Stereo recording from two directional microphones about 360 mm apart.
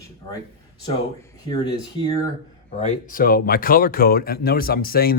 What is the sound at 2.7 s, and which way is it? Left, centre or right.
Speech, centre.